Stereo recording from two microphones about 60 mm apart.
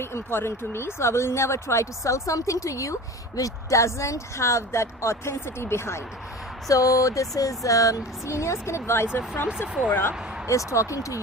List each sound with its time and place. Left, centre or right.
0.0 s speech: left
6.7 s speech: left
9.1 s speech: left
10.5 s speech: left